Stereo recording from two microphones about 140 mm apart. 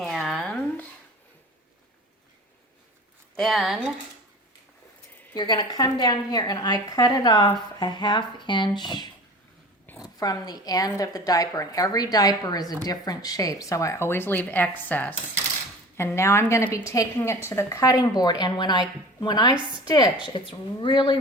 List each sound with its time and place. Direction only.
0.0 s a sound: centre (ahead or behind)
3.3 s speech: centre (ahead or behind)
5.3 s a woman's voice: 30° left (ahead or behind)
10.2 s a woman's voice: 30° left (ahead or behind)